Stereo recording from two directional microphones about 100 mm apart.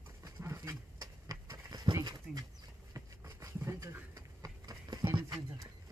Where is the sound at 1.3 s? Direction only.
40° right (ahead or behind).